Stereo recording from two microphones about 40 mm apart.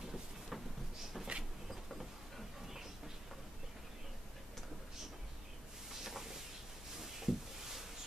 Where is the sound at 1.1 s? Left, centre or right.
Centre.